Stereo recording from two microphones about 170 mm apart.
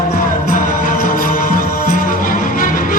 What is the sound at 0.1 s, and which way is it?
Music, 55° left (ahead or behind).